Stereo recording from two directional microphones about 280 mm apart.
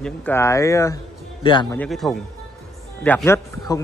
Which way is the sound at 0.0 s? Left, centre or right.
Centre.